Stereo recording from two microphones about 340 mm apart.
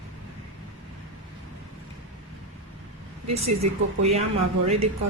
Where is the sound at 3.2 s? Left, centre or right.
Right.